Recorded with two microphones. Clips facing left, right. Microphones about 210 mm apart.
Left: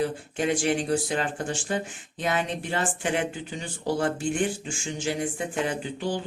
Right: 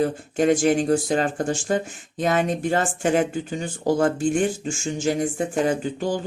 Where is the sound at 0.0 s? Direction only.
45° right (ahead or behind).